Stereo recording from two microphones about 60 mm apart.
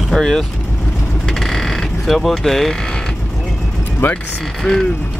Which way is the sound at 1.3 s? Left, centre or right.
Centre.